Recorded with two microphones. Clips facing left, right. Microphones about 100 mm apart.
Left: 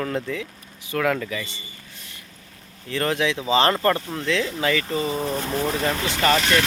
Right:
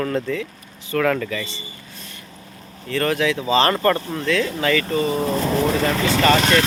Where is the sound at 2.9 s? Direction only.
15° left (ahead or behind).